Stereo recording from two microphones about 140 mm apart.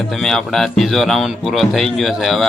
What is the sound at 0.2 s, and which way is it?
Speech, centre (ahead or behind).